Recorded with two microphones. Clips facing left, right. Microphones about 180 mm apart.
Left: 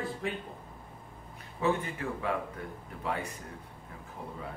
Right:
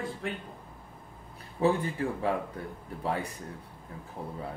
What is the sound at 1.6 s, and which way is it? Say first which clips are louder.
Speech: right 4 dB; 35° right (ahead or behind).